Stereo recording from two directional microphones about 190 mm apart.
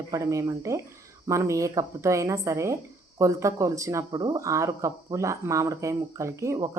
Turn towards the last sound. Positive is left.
turn(degrees=-15)  # may be behind; listen again after turning